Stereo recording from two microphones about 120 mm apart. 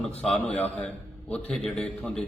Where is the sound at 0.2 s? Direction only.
10° left (ahead or behind).